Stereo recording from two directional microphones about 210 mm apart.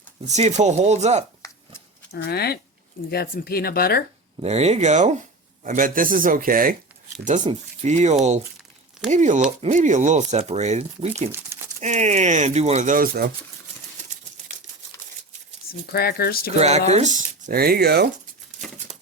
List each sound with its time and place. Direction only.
0.3 s speech: 35° right (ahead or behind)
2.1 s speech: 50° left (ahead or behind)
4.4 s speech: 30° right (ahead or behind)
11.3 s crumpling: 10° right (ahead or behind)
11.8 s speech: 35° right (ahead or behind)
15.9 s speech: 50° left (ahead or behind)
16.6 s speech: 30° right (ahead or behind); by 18.1 s 50° right (ahead or behind)